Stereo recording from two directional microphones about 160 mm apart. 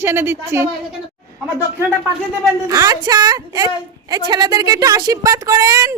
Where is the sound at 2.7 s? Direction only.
25° right (ahead or behind).